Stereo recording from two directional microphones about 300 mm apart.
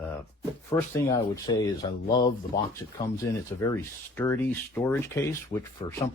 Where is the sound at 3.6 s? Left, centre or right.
Centre.